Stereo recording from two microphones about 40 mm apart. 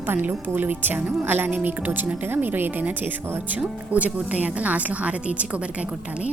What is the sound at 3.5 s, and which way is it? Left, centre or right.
A woman's voice, right.